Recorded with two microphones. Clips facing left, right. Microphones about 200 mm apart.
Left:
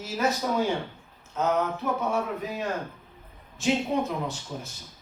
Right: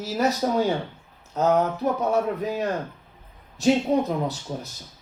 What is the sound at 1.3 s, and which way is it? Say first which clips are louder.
Speech: right 5 dB; 40° right (ahead or behind).